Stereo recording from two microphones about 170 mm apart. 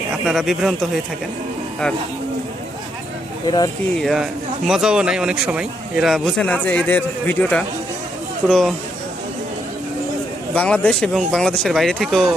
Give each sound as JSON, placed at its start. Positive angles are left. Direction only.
{"t": 0.3, "sound": "speech", "side_deg": 0}
{"t": 3.4, "sound": "speech", "side_deg": 25}
{"t": 3.9, "sound": "speech", "side_deg": 0}
{"t": 10.5, "sound": "a man's voice", "side_deg": 10}